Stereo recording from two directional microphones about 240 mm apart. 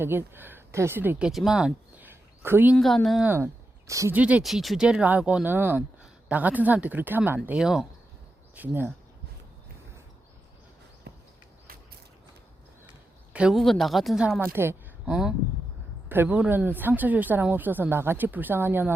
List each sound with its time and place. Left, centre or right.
0.0 s speech: centre
2.7 s speech: centre
11.1 s a sound: right
13.3 s speech: centre